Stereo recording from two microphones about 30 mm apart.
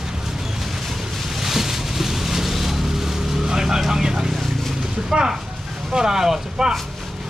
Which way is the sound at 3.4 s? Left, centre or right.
Centre.